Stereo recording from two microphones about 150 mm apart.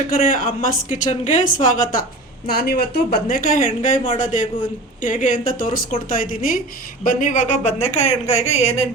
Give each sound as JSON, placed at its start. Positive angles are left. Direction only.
{"t": 0.1, "sound": "speech", "side_deg": 70}
{"t": 2.5, "sound": "speech", "side_deg": 90}